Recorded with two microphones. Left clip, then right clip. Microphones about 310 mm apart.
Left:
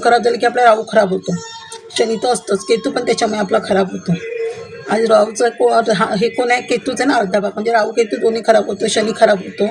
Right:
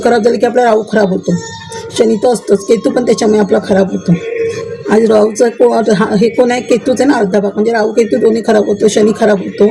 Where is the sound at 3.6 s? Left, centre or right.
Left.